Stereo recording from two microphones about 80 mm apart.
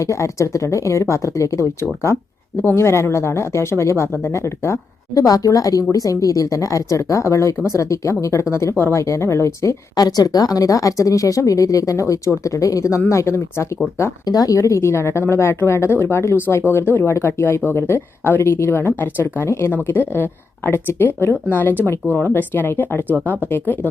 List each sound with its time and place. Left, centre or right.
0.0 s a woman's voice: left
14.3 s speech: left
19.7 s speech: left